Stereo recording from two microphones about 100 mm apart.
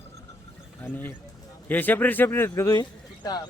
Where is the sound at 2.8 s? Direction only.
40° left (ahead or behind).